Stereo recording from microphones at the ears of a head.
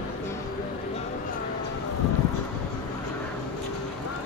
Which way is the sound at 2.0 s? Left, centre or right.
Left.